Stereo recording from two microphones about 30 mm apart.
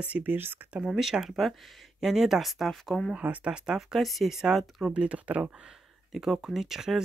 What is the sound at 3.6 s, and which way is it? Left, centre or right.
Speech, right.